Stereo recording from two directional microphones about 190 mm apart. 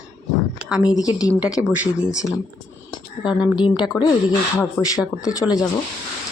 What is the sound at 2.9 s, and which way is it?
Speech, 25° left (ahead or behind).